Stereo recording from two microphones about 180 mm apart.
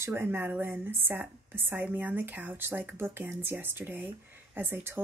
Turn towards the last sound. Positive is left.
turn(degrees=-10)  # may be behind; listen again after turning